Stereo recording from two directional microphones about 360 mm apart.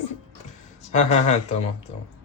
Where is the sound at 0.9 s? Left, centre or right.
Centre.